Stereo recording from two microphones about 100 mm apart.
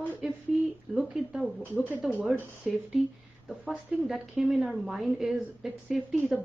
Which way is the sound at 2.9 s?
10° right (ahead or behind).